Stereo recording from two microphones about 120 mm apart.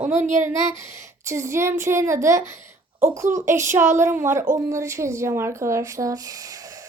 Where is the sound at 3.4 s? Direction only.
25° right (ahead or behind).